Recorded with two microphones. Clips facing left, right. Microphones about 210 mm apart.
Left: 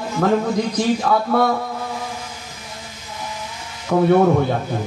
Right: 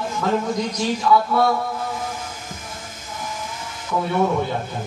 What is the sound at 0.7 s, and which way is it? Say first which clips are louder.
Speech: right 2 dB; 55° left (ahead or behind).